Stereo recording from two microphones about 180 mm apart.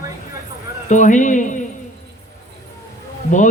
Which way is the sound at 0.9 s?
45° left (ahead or behind).